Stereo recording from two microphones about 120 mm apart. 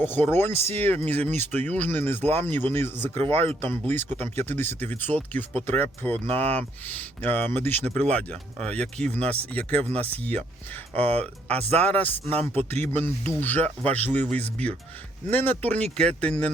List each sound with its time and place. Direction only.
0.0 s speech: 15° left (ahead or behind)
11.8 s speech: 15° left (ahead or behind)
12.2 s speech: 55° right (ahead or behind)
12.7 s speech: 15° left (ahead or behind)